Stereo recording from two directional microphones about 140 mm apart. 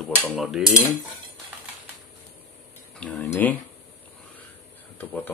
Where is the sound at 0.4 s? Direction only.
Centre (ahead or behind).